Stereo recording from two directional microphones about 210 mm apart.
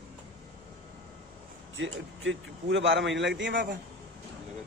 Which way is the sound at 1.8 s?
65° right (ahead or behind).